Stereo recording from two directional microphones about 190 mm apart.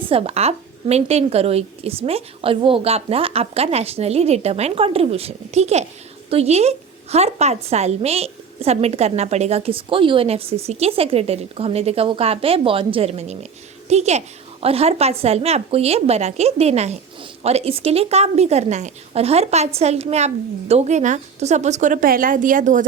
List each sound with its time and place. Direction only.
0.1 s a woman's voice: 30° right (ahead or behind)